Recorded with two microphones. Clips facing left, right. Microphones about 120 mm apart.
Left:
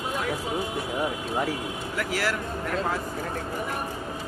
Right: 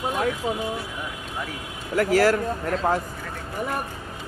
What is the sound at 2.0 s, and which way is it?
Speech, 45° right (ahead or behind).